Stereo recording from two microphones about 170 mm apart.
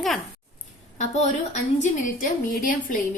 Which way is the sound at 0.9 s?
40° left (ahead or behind).